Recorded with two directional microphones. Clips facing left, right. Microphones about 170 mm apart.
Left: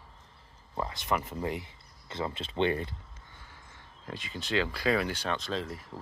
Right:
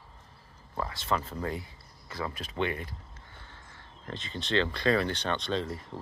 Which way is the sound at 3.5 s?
10° left (ahead or behind).